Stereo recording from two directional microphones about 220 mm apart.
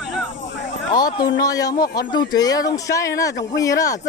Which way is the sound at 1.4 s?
15° left (ahead or behind).